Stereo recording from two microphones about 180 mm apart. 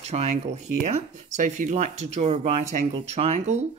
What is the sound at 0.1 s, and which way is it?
Speech, 35° right (ahead or behind).